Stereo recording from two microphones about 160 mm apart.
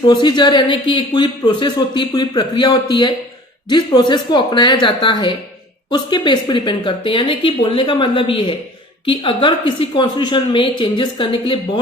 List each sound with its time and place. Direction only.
0.1 s speech: 25° left (ahead or behind)